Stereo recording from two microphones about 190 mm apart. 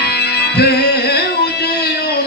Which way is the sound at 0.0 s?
60° left (ahead or behind).